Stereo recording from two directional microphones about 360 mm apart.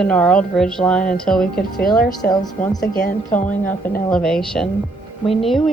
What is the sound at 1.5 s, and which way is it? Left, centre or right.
Speech, left.